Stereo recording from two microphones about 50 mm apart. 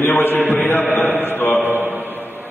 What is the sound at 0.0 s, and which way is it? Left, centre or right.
Speech, left.